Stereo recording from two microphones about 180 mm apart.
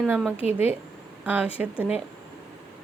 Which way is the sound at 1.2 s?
10° right (ahead or behind).